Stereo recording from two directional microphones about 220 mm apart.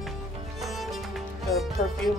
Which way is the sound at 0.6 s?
Centre (ahead or behind).